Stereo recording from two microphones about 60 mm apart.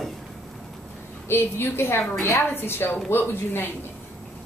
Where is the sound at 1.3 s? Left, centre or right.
Left.